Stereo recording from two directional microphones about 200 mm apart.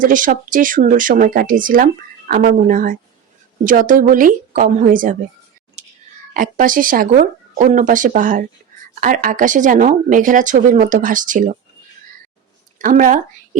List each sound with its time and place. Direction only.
0.0 s speech: 40° right (ahead or behind)
5.8 s whispering: 35° right (ahead or behind)
6.3 s speech: 40° right (ahead or behind)
12.8 s a woman's voice: 40° right (ahead or behind)